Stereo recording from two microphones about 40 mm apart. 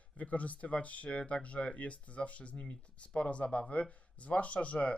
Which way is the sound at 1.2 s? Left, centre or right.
Left.